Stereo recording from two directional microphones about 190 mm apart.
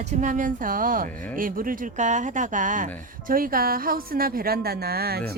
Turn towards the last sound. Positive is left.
turn(degrees=-55)  # may be behind; listen again after turning